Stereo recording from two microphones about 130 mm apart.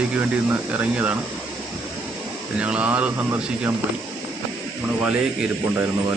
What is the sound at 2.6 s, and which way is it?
Speech, 10° right (ahead or behind).